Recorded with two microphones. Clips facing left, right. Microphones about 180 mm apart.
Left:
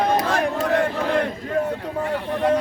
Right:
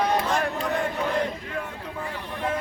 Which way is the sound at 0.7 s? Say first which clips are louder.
Left 6 dB; 90° left.